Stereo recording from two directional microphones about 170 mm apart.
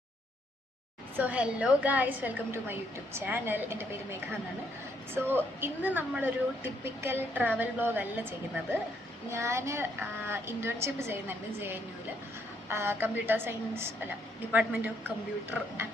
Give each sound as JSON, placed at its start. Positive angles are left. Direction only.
{"t": 1.1, "sound": "a woman's voice", "side_deg": -10}